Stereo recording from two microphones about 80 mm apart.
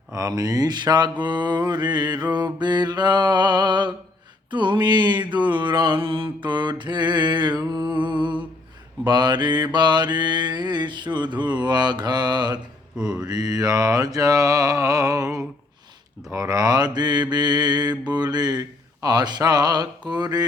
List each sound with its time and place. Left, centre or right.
0.1 s mantra: right
7.6 s music: right
9.0 s mantra: right
13.0 s mantra: centre
13.2 s mantra: right